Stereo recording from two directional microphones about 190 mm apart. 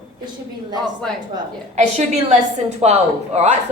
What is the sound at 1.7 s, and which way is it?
A woman's voice, 35° right (ahead or behind).